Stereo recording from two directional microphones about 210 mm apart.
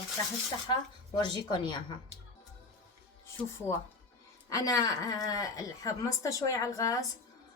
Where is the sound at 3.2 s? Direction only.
10° left (ahead or behind).